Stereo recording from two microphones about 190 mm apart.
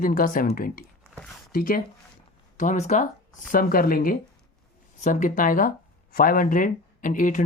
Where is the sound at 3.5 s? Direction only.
50° left (ahead or behind).